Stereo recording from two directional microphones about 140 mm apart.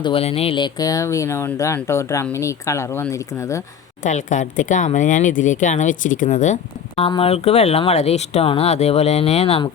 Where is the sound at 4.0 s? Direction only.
60° left (ahead or behind).